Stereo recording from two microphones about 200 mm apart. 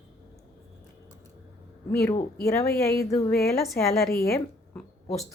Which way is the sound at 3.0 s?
15° left (ahead or behind).